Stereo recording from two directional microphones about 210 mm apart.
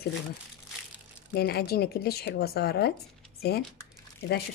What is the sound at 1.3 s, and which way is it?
Speech, 50° left (ahead or behind).